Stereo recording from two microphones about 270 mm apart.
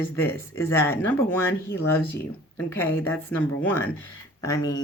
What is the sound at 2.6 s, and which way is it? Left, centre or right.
A woman's voice, centre.